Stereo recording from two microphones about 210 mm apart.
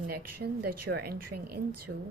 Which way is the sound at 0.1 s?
45° right (ahead or behind).